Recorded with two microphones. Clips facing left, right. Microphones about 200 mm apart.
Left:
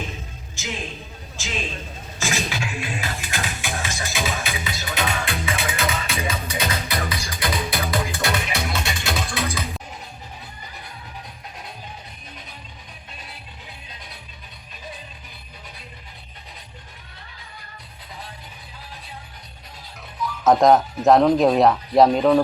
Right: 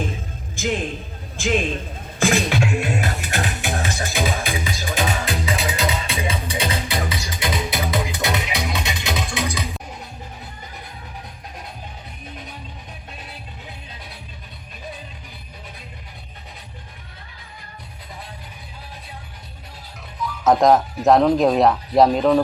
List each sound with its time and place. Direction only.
0.5 s a man's voice: 55° right (ahead or behind)
2.1 s music: 55° right (ahead or behind)
4.9 s music: 30° right (ahead or behind)
5.8 s music: 20° right (ahead or behind)
6.1 s music: 30° right (ahead or behind)
20.2 s speech: centre (ahead or behind)